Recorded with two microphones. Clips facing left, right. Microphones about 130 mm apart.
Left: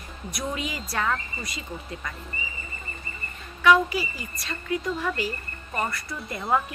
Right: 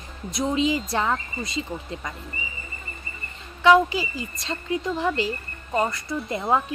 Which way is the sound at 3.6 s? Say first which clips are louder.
Right 3 dB; 25° right (ahead or behind).